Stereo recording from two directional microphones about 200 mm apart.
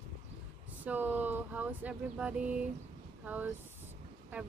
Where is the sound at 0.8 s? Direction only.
10° right (ahead or behind).